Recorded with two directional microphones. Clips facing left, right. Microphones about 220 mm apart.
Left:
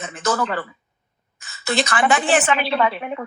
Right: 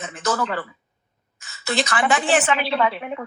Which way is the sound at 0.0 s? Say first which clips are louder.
Left 2 dB; 55° left (ahead or behind).